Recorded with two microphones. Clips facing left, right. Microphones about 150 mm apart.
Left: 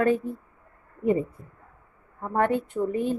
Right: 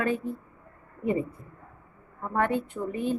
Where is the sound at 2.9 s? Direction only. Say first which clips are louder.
Even; 40° left (ahead or behind).